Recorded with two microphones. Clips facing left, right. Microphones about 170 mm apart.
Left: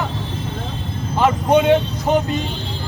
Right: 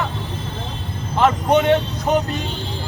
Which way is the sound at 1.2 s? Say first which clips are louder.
Left 1 dB; 10° left (ahead or behind).